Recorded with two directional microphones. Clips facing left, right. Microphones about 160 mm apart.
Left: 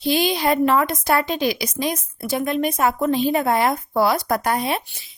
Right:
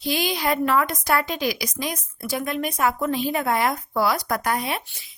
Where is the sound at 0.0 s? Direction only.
25° left (ahead or behind).